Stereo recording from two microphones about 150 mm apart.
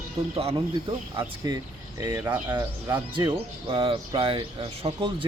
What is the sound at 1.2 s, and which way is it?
Speech, 25° right (ahead or behind).